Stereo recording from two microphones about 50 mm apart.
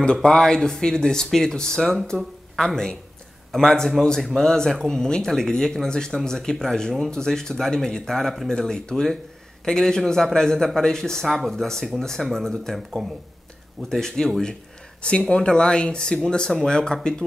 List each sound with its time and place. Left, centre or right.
0.0 s speech: centre